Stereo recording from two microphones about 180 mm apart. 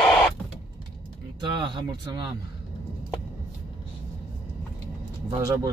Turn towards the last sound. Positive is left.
turn(degrees=-20)  # may be behind; listen again after turning